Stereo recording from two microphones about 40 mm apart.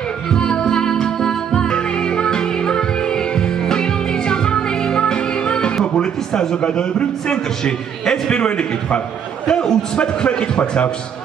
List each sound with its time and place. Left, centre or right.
0.3 s music: centre
5.9 s a man's voice: centre